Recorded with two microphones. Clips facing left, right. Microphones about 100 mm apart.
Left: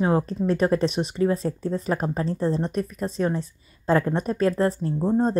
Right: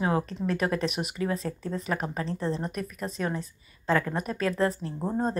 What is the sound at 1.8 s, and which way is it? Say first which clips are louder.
Speech: left 4 dB; 35° left (ahead or behind).